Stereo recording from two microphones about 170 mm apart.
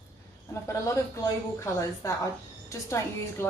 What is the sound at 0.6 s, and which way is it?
A woman's voice, 15° left (ahead or behind).